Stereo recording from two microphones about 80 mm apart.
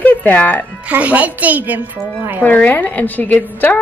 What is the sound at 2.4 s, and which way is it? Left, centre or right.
A woman's voice, left.